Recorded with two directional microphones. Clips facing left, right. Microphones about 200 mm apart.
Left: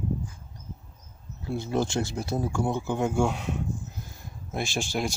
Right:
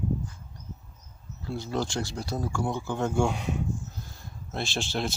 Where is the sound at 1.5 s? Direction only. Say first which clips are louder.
Left 3 dB; 20° left (ahead or behind); by 3.6 s centre (ahead or behind).